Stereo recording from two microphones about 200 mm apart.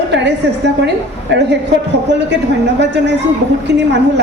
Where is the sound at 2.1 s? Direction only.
60° right (ahead or behind).